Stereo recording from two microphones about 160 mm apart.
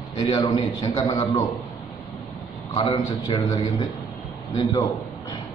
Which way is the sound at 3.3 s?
20° left (ahead or behind).